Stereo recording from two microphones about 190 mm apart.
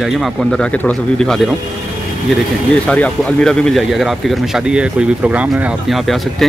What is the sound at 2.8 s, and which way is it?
Speech, 5° left (ahead or behind).